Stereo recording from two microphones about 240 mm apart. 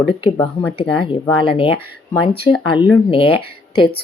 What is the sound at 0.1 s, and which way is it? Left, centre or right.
Speech, left.